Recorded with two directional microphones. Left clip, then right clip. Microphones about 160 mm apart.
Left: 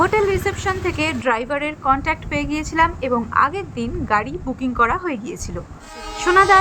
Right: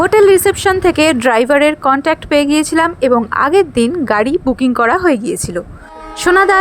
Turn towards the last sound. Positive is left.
turn(degrees=-45)  # may be behind; listen again after turning